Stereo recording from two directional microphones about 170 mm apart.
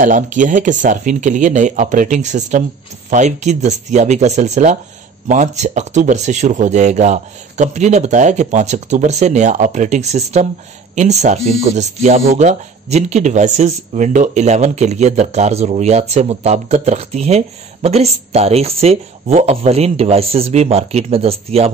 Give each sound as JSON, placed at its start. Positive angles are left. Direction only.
{"t": 0.0, "sound": "speech", "side_deg": -50}